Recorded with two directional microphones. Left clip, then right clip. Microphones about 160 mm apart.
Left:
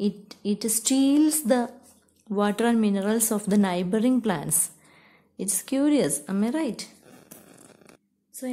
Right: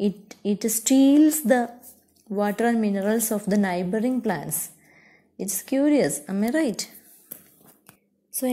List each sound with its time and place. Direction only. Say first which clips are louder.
0.0 s a woman's voice: right 3 dB; 10° right (ahead or behind)
6.6 s speech: right 4 dB; 20° right (ahead or behind)